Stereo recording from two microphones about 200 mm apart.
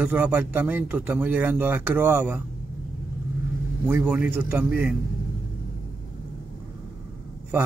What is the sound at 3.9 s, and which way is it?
A man's voice, 10° right (ahead or behind).